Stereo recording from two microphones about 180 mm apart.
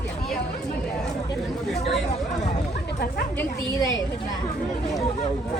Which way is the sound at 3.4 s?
20° left (ahead or behind).